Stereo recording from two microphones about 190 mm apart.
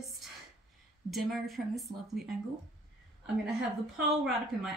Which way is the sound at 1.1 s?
Centre (ahead or behind).